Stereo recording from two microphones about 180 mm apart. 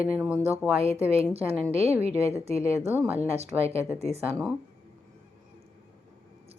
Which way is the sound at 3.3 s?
35° right (ahead or behind).